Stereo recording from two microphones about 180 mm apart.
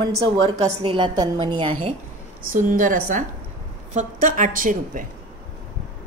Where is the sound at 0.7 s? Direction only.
25° right (ahead or behind).